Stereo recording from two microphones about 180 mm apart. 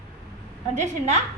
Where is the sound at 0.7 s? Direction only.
40° right (ahead or behind).